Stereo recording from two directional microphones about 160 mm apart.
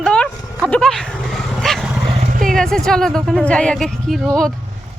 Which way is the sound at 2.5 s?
5° left (ahead or behind).